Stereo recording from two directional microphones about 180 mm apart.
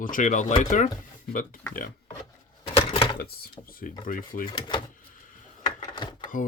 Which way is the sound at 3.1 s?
55° left (ahead or behind).